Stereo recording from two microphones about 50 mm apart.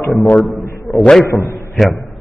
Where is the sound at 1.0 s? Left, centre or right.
Centre.